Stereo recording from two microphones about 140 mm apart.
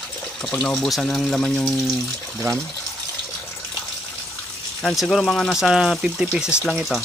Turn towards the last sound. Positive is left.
turn(degrees=0)  # may be behind; listen again after turning